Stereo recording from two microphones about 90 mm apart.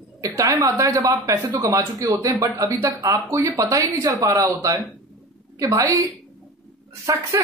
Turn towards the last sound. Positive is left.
turn(degrees=-40)  # may be behind; listen again after turning